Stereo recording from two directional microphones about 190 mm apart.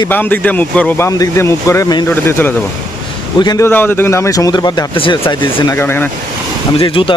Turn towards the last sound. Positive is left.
turn(degrees=25)  # may be behind; listen again after turning